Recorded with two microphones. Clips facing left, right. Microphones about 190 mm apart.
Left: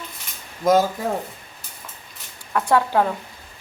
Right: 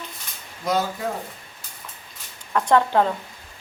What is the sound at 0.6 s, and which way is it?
Speech, 45° left (ahead or behind).